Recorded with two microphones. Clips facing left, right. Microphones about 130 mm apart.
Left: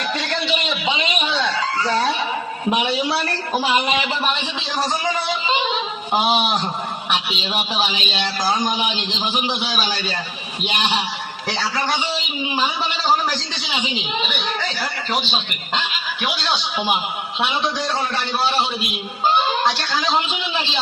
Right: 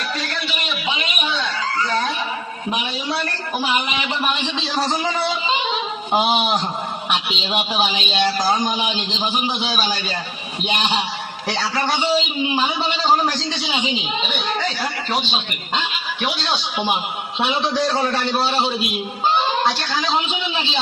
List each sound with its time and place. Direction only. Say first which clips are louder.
1.3 s chicken: left 2 dB; 30° left (ahead or behind)
3.6 s speech: left 2 dB; 35° left (ahead or behind)
7.1 s a man's voice: right 1 dB; 15° right (ahead or behind)
17.4 s a man's voice: right 3 dB; centre (ahead or behind)